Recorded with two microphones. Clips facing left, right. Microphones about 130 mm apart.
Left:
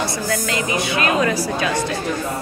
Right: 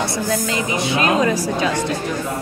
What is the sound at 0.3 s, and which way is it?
Speech, 20° right (ahead or behind).